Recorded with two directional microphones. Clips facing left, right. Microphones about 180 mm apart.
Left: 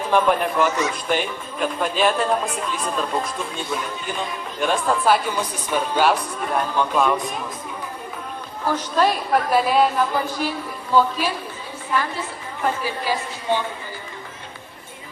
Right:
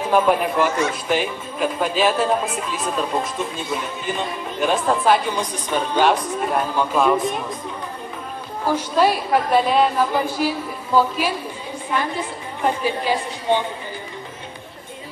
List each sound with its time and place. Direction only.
0.1 s speech: 5° right (ahead or behind)
6.5 s speech: 10° right (ahead or behind)
8.6 s speech: 10° right (ahead or behind)
10.1 s speech: 10° right (ahead or behind)
11.9 s a woman's voice: 20° right (ahead or behind)